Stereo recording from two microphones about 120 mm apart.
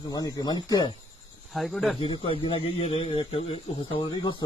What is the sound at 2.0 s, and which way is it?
Speech, 45° left (ahead or behind).